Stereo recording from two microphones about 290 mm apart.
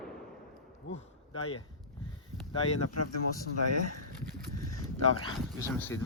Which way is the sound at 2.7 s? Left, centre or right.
Left.